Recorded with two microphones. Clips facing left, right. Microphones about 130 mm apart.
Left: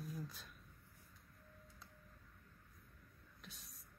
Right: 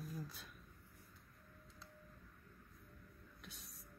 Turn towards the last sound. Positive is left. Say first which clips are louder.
# right 2 dB
turn(degrees=0)  # may be behind; listen again after turning